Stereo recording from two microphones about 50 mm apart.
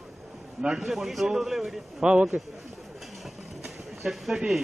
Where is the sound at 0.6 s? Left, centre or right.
Centre.